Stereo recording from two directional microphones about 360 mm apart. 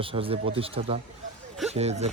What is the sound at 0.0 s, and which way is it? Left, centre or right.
A man's voice, centre.